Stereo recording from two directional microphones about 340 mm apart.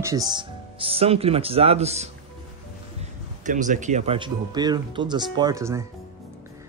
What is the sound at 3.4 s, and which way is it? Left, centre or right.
Speech, right.